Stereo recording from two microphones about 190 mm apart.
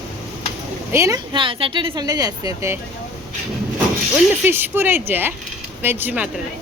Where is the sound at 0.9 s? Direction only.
15° right (ahead or behind).